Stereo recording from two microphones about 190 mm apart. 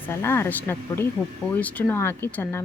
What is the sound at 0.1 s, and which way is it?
Speech, 15° left (ahead or behind).